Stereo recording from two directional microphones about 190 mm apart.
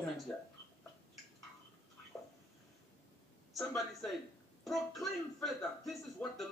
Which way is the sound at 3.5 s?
Centre (ahead or behind).